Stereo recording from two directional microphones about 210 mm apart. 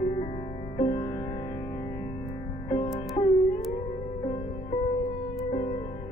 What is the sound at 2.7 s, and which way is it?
Music, 25° left (ahead or behind).